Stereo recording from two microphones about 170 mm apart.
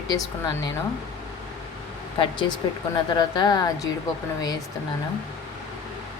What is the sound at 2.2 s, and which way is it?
A woman's voice, 25° left (ahead or behind).